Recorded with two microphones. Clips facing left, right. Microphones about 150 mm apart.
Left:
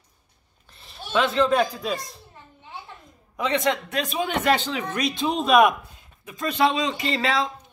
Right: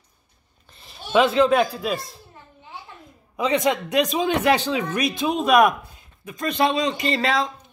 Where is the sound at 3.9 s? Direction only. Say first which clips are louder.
Right 5 dB; 15° right (ahead or behind).